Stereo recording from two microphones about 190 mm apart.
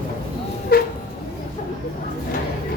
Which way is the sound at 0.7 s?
55° left (ahead or behind).